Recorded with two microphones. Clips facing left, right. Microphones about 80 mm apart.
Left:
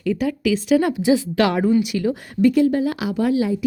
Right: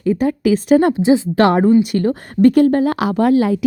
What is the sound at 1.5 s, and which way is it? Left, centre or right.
Speech, right.